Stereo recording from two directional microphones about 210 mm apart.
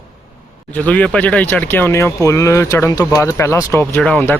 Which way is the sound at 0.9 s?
5° left (ahead or behind).